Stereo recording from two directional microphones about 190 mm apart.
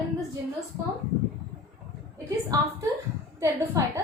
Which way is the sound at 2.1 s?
15° right (ahead or behind).